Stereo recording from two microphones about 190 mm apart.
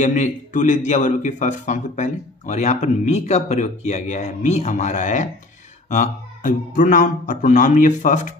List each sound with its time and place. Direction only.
0.0 s a man's voice: 40° left (ahead or behind)